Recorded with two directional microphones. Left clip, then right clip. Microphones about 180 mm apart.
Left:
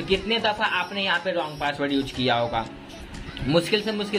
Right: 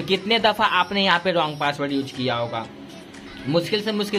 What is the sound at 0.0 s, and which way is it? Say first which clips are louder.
Speech: right 4 dB; 25° right (ahead or behind).